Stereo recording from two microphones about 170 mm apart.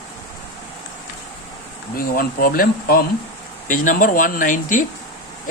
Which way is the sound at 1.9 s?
60° left (ahead or behind).